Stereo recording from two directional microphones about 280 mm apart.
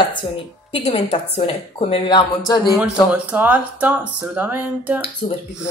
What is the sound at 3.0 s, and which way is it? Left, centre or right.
Speech, centre.